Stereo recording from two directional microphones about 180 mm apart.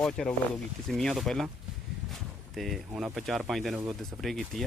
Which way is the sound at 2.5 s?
Centre (ahead or behind).